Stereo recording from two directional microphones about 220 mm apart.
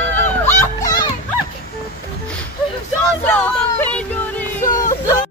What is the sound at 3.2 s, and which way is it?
Music, 10° left (ahead or behind).